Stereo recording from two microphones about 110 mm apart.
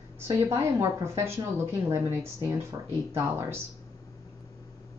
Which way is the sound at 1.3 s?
25° right (ahead or behind).